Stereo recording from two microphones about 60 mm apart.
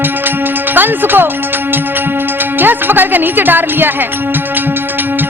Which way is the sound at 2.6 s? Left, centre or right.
Right.